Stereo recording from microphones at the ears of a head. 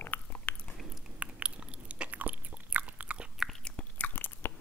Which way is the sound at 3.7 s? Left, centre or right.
Left.